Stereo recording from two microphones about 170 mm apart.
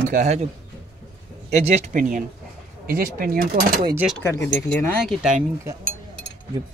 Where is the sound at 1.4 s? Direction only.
40° right (ahead or behind).